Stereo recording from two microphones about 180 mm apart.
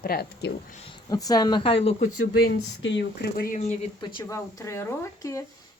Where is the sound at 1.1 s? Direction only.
20° left (ahead or behind).